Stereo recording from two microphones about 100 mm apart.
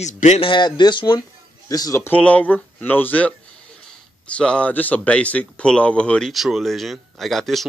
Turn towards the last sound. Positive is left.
turn(degrees=0)  # may be behind; listen again after turning